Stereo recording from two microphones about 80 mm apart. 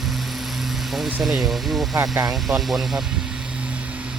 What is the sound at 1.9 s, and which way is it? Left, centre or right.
Speech, right.